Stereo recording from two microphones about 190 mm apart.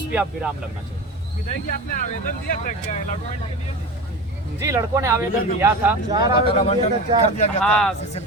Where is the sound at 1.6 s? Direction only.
45° left (ahead or behind).